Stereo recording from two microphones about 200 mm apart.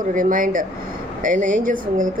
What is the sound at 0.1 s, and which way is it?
A woman's voice, 40° right (ahead or behind).